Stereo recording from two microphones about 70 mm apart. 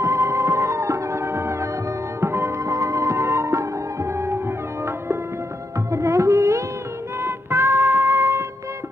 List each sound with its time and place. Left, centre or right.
0.0 s music: right
5.9 s music: right
7.2 s music: right